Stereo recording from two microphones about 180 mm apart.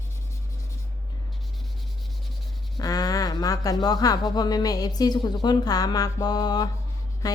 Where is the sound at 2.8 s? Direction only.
20° left (ahead or behind).